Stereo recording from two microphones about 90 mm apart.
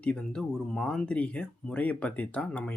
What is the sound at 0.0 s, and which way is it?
Speech, 10° left (ahead or behind).